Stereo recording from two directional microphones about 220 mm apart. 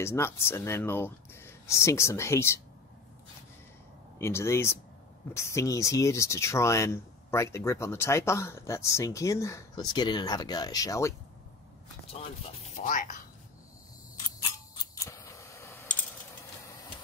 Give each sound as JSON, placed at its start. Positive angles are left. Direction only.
{"t": 0.0, "sound": "speech", "side_deg": 10}
{"t": 4.2, "sound": "speech", "side_deg": 10}
{"t": 12.7, "sound": "speech", "side_deg": 35}
{"t": 14.8, "sound": "keys jangling", "side_deg": 15}